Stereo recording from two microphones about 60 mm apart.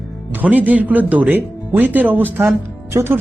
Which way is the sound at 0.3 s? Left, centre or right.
Right.